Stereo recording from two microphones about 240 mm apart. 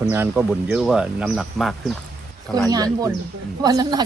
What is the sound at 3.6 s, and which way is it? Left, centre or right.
Speech, centre.